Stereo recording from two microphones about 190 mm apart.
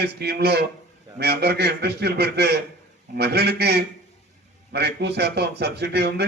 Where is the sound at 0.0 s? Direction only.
55° right (ahead or behind).